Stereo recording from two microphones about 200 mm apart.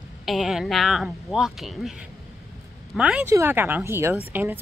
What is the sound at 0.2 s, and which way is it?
Speech, centre (ahead or behind).